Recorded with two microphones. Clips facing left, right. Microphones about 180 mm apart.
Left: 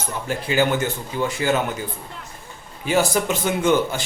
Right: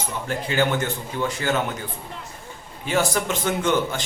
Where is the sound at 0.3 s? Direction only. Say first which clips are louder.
Left 2 dB; 10° left (ahead or behind).